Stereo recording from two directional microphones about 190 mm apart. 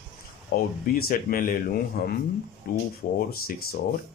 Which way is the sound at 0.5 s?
55° left (ahead or behind).